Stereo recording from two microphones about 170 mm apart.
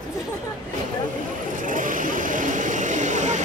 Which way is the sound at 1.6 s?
50° right (ahead or behind).